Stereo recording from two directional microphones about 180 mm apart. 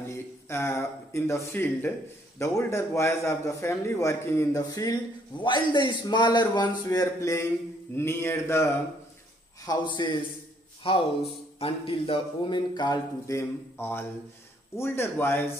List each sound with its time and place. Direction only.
0.5 s a man's voice: 15° left (ahead or behind)
9.7 s a man's voice: 25° left (ahead or behind)